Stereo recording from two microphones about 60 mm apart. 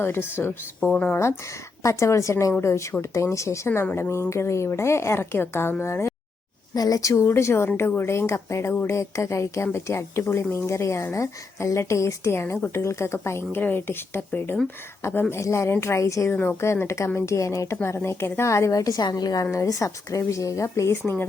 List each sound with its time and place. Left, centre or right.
0.0 s speech: left
0.9 s speech: centre
1.8 s a woman's voice: left
6.7 s a woman's voice: left
13.6 s speech: left
15.3 s a woman's voice: left
16.3 s speech: left
16.8 s a woman's voice: left
19.5 s a woman's voice: left